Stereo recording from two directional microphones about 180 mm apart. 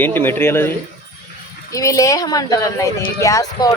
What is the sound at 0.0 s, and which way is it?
Speech, 10° left (ahead or behind).